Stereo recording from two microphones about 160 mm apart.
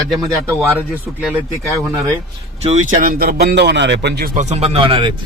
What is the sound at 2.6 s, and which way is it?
Speech, 50° right (ahead or behind).